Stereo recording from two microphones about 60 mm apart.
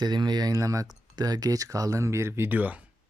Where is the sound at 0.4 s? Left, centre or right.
Right.